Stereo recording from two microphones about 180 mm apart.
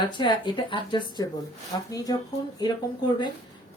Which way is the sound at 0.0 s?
25° left (ahead or behind).